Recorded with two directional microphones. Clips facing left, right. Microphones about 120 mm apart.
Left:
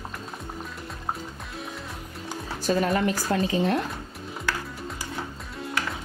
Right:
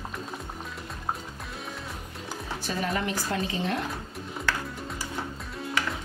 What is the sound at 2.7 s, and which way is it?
Speech, 40° left (ahead or behind).